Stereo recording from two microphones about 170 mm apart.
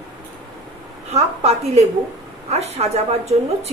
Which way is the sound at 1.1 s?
40° right (ahead or behind).